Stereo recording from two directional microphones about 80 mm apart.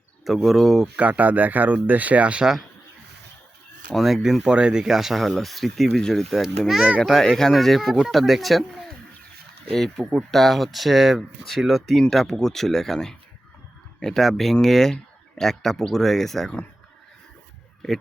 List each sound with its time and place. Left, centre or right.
0.3 s speech: centre
0.9 s speech: centre
3.9 s speech: centre
7.0 s speech: centre
10.0 s speech: centre
10.3 s speech: centre